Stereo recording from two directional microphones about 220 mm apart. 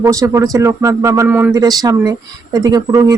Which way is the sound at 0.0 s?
15° right (ahead or behind).